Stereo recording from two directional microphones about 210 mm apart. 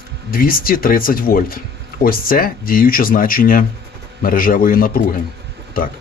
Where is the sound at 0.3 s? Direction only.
45° left (ahead or behind).